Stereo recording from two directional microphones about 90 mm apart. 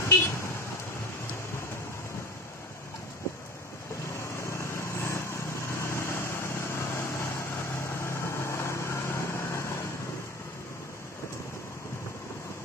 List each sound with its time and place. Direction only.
0.0 s vehicle: 30° left (ahead or behind)
4.2 s vehicle: 30° left (ahead or behind)